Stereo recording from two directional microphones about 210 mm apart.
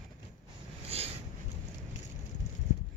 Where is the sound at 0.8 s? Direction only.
30° right (ahead or behind).